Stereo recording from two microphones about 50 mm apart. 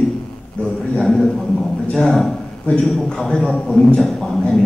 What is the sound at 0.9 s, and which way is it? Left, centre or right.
Speech, centre.